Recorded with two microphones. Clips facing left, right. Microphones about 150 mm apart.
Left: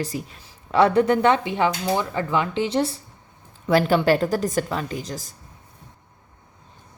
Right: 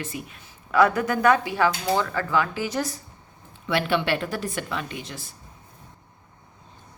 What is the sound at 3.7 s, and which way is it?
A woman's voice, 40° left (ahead or behind).